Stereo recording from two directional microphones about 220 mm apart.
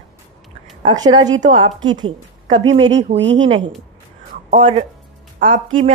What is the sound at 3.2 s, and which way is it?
Speech, 55° right (ahead or behind).